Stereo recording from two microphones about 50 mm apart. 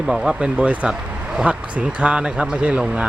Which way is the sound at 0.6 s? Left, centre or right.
Right.